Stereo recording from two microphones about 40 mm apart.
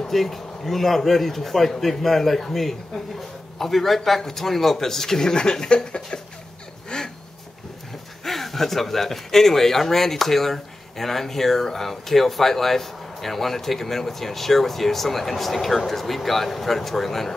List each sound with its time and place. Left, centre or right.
0.1 s speech: centre
6.9 s a sound: left
8.2 s speech: centre